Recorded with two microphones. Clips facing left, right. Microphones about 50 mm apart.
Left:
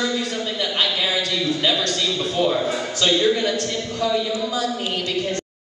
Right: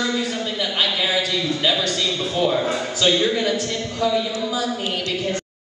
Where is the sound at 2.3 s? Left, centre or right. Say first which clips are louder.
Right 1 dB; centre.